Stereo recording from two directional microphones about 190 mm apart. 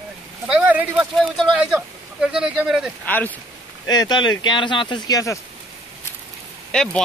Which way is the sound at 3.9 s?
20° left (ahead or behind).